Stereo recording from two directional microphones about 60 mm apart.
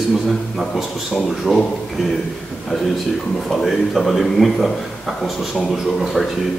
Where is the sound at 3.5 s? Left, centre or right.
Centre.